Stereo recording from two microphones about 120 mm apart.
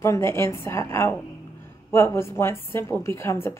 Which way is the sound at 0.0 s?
20° left (ahead or behind).